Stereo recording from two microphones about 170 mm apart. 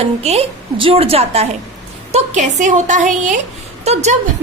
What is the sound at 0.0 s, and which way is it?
A woman's voice, 35° right (ahead or behind).